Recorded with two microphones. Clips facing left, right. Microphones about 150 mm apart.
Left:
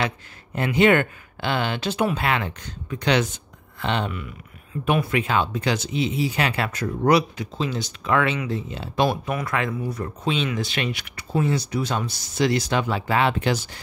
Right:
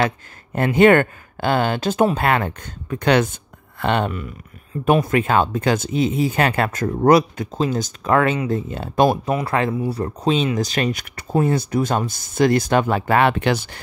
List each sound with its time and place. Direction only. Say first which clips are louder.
0.6 s speech: right 5 dB; 50° right (ahead or behind)
9.3 s speech: right 5 dB; 30° right (ahead or behind); by 13.7 s 60° right (ahead or behind)